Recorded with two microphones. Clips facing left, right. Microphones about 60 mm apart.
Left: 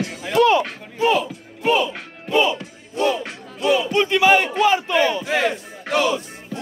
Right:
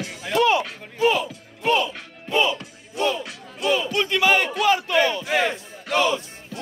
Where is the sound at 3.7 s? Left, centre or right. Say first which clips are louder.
Left 5 dB; left.